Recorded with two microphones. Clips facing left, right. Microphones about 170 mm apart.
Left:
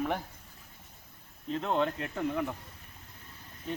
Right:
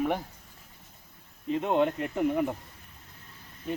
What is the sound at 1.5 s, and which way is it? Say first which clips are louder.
Speech: right 4 dB; 15° right (ahead or behind).